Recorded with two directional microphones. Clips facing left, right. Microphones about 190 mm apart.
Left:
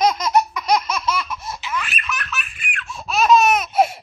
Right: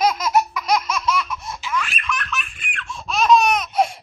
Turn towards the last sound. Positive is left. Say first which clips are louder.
# left 2 dB
turn(degrees=5)  # may be behind; listen again after turning